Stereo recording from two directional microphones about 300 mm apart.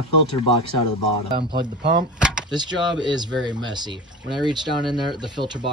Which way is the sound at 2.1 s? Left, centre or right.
Centre.